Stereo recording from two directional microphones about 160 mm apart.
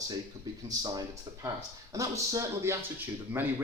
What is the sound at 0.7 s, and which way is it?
A man's voice, 25° right (ahead or behind).